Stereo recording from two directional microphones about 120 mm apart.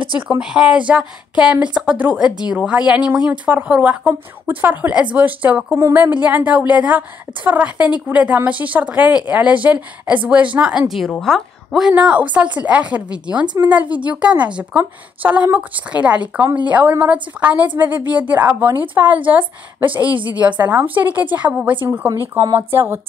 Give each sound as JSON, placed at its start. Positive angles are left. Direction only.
{"t": 0.4, "sound": "a woman's voice", "side_deg": -5}
{"t": 11.9, "sound": "a woman's voice", "side_deg": -10}